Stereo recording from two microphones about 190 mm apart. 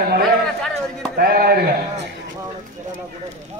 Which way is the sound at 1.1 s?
55° right (ahead or behind).